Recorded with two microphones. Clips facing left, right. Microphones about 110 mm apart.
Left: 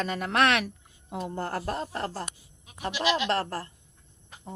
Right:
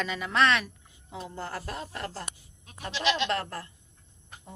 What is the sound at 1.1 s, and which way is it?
Speech, 50° left (ahead or behind).